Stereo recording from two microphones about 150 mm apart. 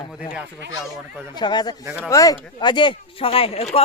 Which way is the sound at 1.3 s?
30° left (ahead or behind).